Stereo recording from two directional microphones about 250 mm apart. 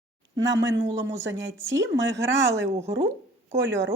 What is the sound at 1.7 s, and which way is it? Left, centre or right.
Speech, right.